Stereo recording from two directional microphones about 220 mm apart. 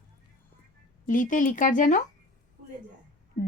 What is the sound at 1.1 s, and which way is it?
Speech, 35° left (ahead or behind).